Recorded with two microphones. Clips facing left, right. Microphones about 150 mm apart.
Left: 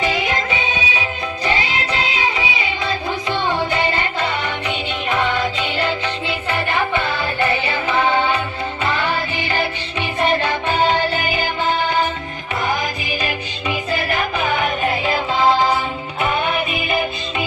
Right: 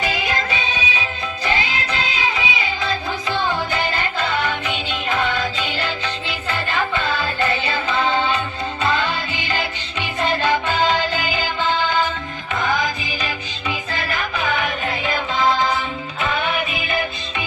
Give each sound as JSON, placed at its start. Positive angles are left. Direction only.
{"t": 0.0, "sound": "music", "side_deg": 25}
{"t": 5.6, "sound": "music", "side_deg": 25}
{"t": 10.0, "sound": "music", "side_deg": 25}
{"t": 14.3, "sound": "music", "side_deg": 30}